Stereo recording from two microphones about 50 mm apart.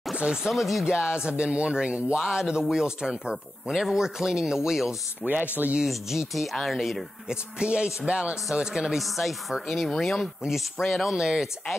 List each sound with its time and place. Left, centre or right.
0.1 s speech: centre
0.8 s speech: centre
5.2 s speech: right
5.9 s speech: centre
7.2 s speech: centre
8.9 s speech: centre